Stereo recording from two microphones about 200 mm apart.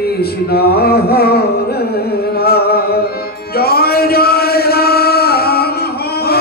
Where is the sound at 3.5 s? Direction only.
50° left (ahead or behind).